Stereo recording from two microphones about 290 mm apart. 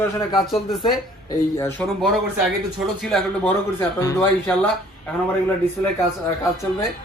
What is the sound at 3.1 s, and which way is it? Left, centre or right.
A man's voice, centre.